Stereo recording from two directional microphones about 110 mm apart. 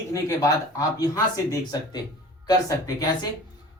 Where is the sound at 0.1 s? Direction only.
30° left (ahead or behind).